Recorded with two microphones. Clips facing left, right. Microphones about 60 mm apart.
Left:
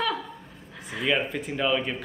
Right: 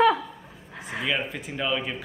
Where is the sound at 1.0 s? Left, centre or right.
Centre.